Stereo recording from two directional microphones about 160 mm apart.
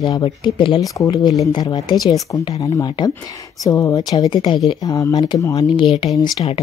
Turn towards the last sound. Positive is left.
turn(degrees=30)  # may be behind; listen again after turning